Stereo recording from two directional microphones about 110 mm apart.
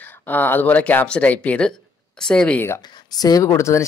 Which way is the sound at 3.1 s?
35° left (ahead or behind).